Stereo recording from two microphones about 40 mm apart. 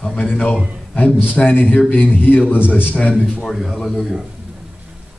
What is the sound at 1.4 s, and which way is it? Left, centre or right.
A man's voice, left.